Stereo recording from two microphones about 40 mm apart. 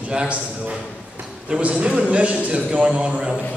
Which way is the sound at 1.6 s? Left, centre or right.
Right.